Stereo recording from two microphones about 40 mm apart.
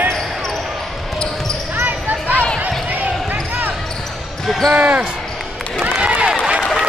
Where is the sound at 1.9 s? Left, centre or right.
Right.